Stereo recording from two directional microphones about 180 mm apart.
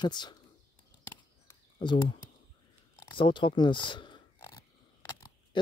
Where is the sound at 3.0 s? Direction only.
25° left (ahead or behind).